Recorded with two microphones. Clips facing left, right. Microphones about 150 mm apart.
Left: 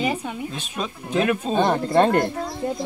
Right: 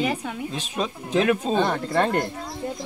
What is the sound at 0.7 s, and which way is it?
Speech, 25° right (ahead or behind).